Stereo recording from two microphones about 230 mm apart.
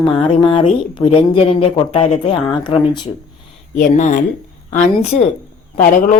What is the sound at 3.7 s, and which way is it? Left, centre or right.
A man's voice, left.